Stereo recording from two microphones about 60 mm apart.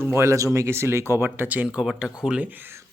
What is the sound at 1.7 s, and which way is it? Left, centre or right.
Speech, centre.